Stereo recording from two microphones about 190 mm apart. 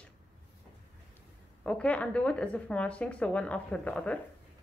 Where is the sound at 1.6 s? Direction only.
5° left (ahead or behind).